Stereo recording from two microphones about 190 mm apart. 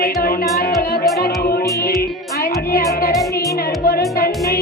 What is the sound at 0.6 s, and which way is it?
Speech, 55° left (ahead or behind).